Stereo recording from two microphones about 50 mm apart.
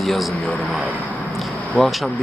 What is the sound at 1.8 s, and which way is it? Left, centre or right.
Speech, left.